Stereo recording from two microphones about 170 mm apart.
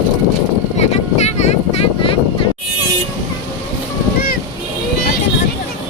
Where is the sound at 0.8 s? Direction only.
40° left (ahead or behind).